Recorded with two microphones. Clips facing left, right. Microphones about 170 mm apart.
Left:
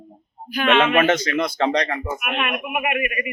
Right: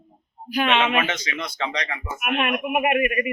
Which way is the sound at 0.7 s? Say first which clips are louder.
Left 7 dB; 50° left (ahead or behind).